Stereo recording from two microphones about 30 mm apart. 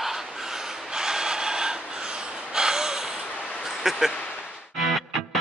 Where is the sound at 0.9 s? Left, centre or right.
Right.